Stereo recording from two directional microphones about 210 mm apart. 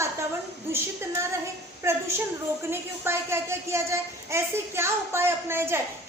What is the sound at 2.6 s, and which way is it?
Speech, 10° right (ahead or behind).